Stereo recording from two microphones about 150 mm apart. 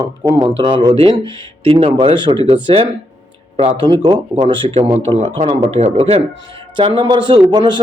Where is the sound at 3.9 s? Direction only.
35° right (ahead or behind).